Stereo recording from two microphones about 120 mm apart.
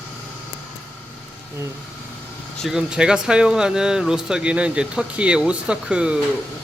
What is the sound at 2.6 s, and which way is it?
Speech, 5° right (ahead or behind).